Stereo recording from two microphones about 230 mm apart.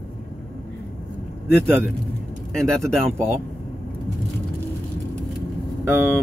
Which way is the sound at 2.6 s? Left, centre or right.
Centre.